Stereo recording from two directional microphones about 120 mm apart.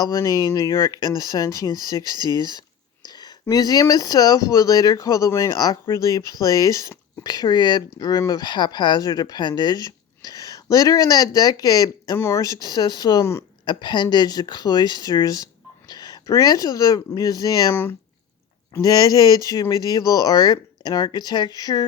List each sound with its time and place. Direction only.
0.0 s speech: 30° left (ahead or behind)
2.2 s whispering: 30° left (ahead or behind)
3.4 s speech: 30° left (ahead or behind)